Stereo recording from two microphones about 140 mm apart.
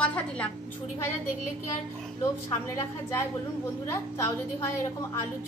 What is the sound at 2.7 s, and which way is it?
A woman's voice, 20° left (ahead or behind).